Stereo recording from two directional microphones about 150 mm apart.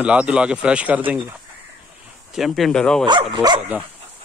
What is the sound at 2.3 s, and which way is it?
Speech, centre (ahead or behind).